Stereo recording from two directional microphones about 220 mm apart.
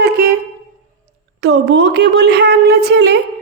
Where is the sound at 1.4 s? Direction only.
50° right (ahead or behind).